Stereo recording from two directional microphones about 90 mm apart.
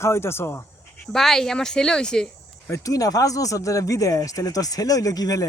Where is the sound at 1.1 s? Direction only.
5° left (ahead or behind).